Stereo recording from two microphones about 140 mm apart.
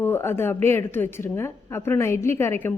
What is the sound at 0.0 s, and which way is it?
A woman's voice, 15° left (ahead or behind).